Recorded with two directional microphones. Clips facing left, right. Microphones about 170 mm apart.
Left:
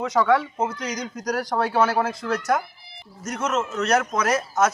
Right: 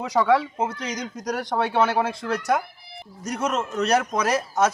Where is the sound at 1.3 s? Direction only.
25° right (ahead or behind).